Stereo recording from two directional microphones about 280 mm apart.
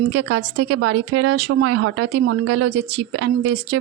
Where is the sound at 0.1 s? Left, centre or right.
Right.